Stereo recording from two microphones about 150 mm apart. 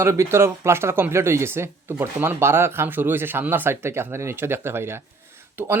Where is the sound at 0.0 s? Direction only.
20° right (ahead or behind).